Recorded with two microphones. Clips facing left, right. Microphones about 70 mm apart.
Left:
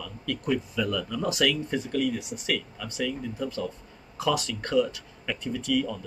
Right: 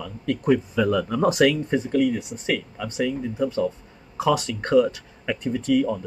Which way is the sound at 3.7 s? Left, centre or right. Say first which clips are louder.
Right 8 dB; right.